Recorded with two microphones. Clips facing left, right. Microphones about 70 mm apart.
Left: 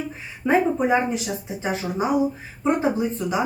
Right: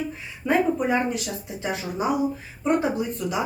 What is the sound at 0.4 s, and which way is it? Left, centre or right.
Speech, centre.